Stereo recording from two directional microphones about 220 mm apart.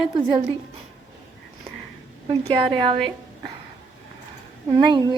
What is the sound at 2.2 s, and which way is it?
Speech, 25° right (ahead or behind).